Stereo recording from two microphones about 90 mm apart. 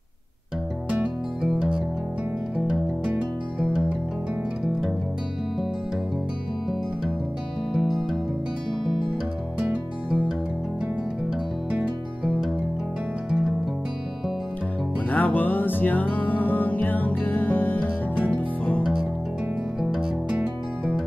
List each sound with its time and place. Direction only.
0.8 s music: 10° right (ahead or behind)
7.7 s music: centre (ahead or behind)
9.6 s music: 10° right (ahead or behind)
15.0 s music: 15° left (ahead or behind)
19.8 s music: 5° right (ahead or behind)